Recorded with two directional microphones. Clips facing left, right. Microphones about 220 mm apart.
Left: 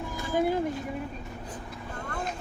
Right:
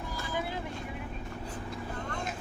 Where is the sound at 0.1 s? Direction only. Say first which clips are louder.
Left 10 dB; 45° left (ahead or behind).